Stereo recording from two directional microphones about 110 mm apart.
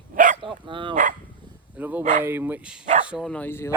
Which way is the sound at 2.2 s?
20° right (ahead or behind).